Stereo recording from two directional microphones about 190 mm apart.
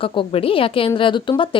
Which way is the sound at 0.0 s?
25° left (ahead or behind).